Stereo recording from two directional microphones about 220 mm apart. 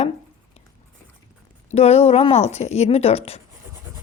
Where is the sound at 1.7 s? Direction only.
30° left (ahead or behind).